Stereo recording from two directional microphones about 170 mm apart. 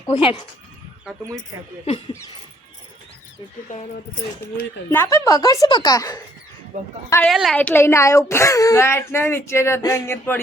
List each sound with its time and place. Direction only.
0.0 s a woman's voice: 25° left (ahead or behind)
3.7 s speech: 45° left (ahead or behind)
4.9 s a woman's voice: 15° left (ahead or behind)
6.7 s a woman's voice: 50° right (ahead or behind)
7.3 s a woman's voice: centre (ahead or behind)